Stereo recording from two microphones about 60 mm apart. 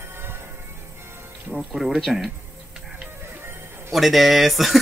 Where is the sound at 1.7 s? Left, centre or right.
Centre.